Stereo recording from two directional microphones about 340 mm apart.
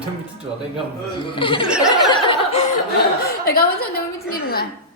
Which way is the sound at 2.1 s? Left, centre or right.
Centre.